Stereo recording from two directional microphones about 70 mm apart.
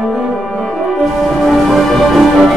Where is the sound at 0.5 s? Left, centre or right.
Centre.